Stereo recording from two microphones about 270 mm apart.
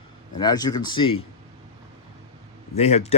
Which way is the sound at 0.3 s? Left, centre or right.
Centre.